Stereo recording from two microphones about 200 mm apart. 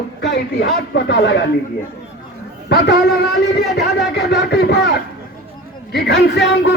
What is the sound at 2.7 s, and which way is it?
A man's voice, 55° left (ahead or behind).